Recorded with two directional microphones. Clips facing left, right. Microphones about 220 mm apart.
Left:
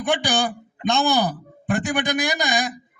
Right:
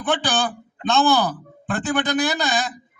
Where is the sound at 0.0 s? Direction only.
15° left (ahead or behind).